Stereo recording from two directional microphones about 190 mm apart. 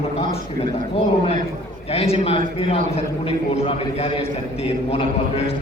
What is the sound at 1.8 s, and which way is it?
A man's voice, 30° left (ahead or behind).